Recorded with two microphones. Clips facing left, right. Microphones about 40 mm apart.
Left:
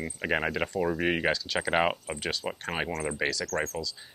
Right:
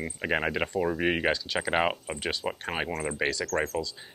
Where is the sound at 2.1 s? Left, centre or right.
Centre.